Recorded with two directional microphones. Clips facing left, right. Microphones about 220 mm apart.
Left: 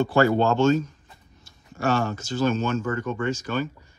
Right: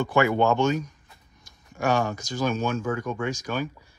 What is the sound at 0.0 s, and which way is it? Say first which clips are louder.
Speech: left 2 dB; 15° right (ahead or behind).